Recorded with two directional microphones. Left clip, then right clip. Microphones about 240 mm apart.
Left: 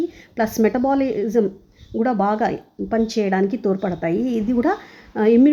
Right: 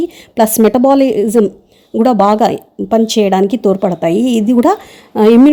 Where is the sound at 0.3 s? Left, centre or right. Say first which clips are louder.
Right 9 dB; right.